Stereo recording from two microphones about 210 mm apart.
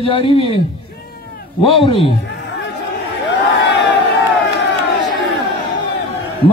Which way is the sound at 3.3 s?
60° left (ahead or behind).